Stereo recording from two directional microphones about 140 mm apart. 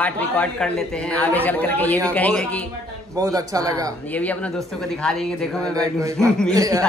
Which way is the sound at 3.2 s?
25° right (ahead or behind).